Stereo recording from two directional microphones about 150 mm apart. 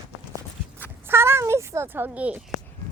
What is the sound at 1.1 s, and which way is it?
Speech, 15° right (ahead or behind).